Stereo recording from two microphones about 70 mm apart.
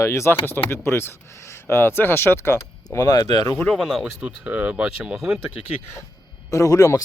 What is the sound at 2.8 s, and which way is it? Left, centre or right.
Speech, left.